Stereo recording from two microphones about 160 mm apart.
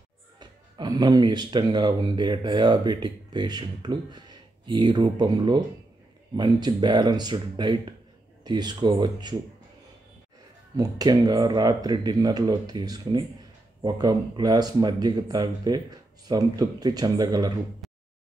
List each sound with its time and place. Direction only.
0.4 s speech: 25° right (ahead or behind)
10.8 s speech: 25° right (ahead or behind)